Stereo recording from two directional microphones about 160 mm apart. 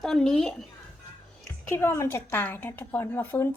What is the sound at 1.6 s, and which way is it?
A woman's voice, 15° left (ahead or behind).